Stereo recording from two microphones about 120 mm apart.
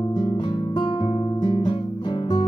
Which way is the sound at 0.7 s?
40° left (ahead or behind).